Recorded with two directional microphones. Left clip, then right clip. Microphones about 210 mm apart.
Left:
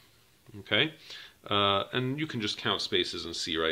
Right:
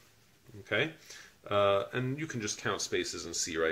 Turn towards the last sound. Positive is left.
turn(degrees=40)  # may be behind; listen again after turning